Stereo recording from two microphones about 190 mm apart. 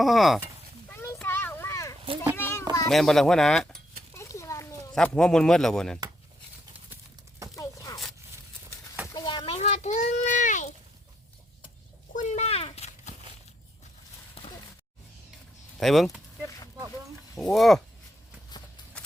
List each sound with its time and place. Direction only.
0.0 s speech: centre (ahead or behind)
0.9 s children playing: 15° left (ahead or behind)
2.9 s speech: centre (ahead or behind)
4.1 s a sound: 15° left (ahead or behind)
4.9 s speech: 5° left (ahead or behind)
6.9 s horse: 15° right (ahead or behind)
7.5 s zipper: 20° left (ahead or behind)
9.1 s a sound: 25° left (ahead or behind); by 10.7 s 40° left (ahead or behind)
12.1 s horse: 40° left (ahead or behind)
15.8 s speech: centre (ahead or behind)
17.3 s speech: centre (ahead or behind)